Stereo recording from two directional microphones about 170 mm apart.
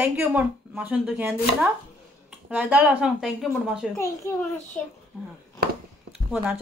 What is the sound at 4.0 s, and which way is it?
Speech, 15° left (ahead or behind).